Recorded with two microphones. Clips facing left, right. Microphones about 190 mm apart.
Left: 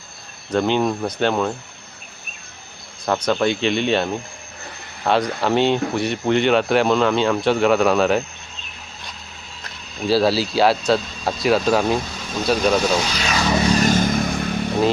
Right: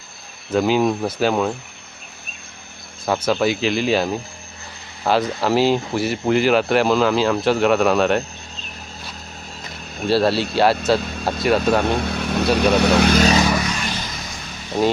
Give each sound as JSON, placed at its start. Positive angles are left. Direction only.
{"t": 0.5, "sound": "speech", "side_deg": -5}
{"t": 3.1, "sound": "speech", "side_deg": -5}
{"t": 10.1, "sound": "speech", "side_deg": 0}
{"t": 11.9, "sound": "vehicle", "side_deg": -65}
{"t": 12.5, "sound": "speech", "side_deg": -65}
{"t": 13.6, "sound": "vehicle", "side_deg": 35}